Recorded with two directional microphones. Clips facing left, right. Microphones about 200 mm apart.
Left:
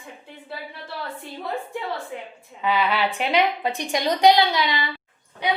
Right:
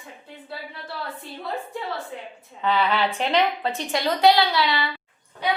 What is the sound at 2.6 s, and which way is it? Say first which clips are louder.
A woman's voice: even; 10° left (ahead or behind).